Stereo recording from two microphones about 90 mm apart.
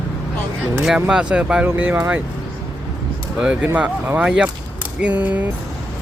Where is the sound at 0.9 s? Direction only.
10° right (ahead or behind).